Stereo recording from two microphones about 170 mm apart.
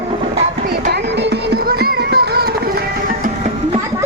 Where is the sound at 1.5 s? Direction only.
65° right (ahead or behind).